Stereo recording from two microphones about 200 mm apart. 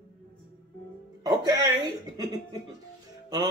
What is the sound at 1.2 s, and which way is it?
Music, 20° right (ahead or behind).